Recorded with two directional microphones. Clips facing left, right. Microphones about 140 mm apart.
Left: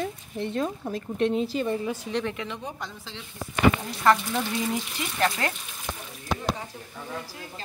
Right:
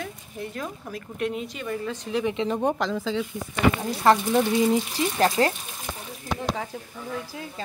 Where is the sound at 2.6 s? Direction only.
90° right.